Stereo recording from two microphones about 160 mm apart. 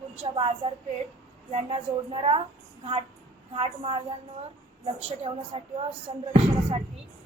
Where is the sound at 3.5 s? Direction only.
35° right (ahead or behind).